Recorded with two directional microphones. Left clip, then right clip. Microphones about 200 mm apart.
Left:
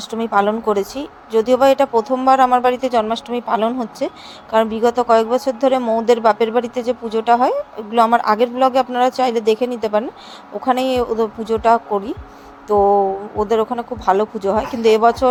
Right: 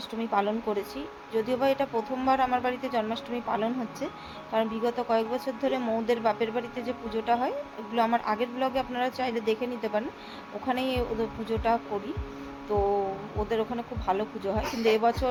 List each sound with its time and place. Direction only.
0.0 s speech: 35° left (ahead or behind)